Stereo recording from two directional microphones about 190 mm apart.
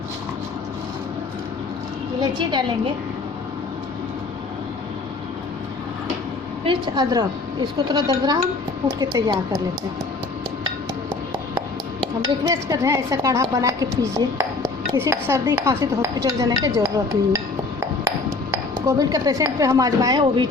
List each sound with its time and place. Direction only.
2.2 s a woman's voice: 25° right (ahead or behind)
6.7 s speech: 25° right (ahead or behind)
12.5 s a woman's voice: 15° right (ahead or behind)
18.5 s speech: 15° right (ahead or behind)